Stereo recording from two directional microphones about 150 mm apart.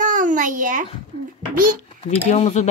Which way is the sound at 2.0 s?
50° left (ahead or behind).